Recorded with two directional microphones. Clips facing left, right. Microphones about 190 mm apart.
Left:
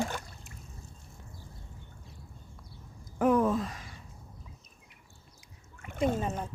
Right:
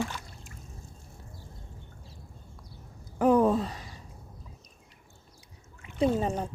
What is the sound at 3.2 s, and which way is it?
Gasp, 30° right (ahead or behind).